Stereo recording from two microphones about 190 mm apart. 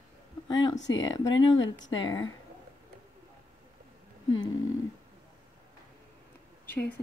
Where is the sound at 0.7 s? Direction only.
70° left (ahead or behind).